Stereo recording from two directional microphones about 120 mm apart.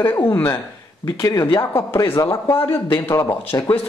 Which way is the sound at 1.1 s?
30° left (ahead or behind).